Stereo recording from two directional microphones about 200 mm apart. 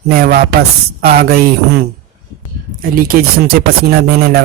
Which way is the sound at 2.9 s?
50° right (ahead or behind).